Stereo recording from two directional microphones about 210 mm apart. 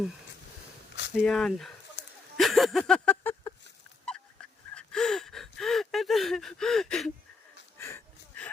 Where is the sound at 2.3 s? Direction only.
Centre (ahead or behind).